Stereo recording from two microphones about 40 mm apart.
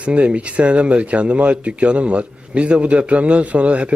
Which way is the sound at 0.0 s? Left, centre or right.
Right.